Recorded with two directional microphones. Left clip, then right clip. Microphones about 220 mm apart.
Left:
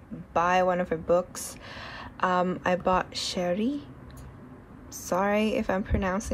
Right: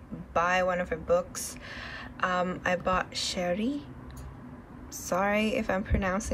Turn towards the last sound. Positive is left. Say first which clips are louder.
# left 1 dB
turn(degrees=10)  # may be behind; listen again after turning